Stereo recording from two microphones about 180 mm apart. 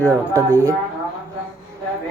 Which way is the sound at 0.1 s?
15° right (ahead or behind).